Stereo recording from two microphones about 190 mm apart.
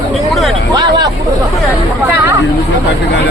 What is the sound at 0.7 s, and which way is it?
Hubbub, 20° right (ahead or behind).